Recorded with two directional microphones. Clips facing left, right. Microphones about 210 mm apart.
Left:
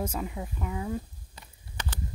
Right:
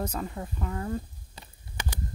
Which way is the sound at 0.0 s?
10° left (ahead or behind).